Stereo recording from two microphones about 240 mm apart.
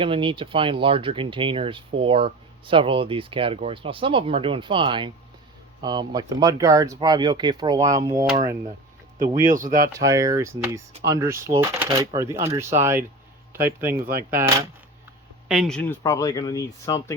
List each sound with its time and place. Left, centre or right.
0.0 s speech: right
9.7 s a man's voice: centre
15.4 s speech: centre